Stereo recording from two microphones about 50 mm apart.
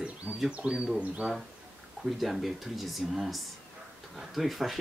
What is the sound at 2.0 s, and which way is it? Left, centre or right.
Speech, centre.